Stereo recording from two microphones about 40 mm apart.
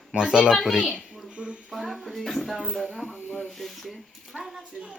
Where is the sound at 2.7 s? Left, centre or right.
Centre.